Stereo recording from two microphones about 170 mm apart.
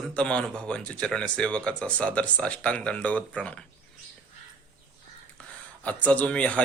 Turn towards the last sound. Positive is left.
turn(degrees=5)  # may be behind; listen again after turning